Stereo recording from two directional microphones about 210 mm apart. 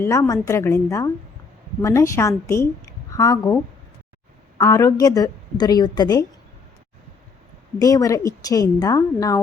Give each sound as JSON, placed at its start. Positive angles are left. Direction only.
{"t": 0.0, "sound": "a woman's voice", "side_deg": 15}
{"t": 7.8, "sound": "a woman's voice", "side_deg": 15}